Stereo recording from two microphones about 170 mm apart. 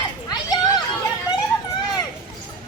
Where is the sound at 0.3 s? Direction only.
25° left (ahead or behind).